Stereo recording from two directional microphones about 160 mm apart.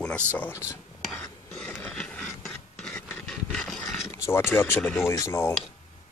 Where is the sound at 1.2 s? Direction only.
5° left (ahead or behind).